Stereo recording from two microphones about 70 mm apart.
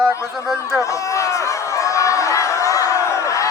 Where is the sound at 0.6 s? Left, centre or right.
Left.